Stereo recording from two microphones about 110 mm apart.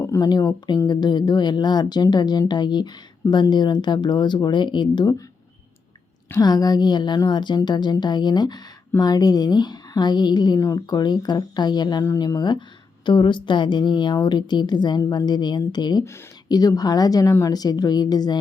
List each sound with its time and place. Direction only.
0.0 s a sound: 25° left (ahead or behind)
0.3 s a woman's voice: 40° left (ahead or behind)
6.3 s a woman's voice: 35° left (ahead or behind)
12.0 s a woman's voice: 30° left (ahead or behind)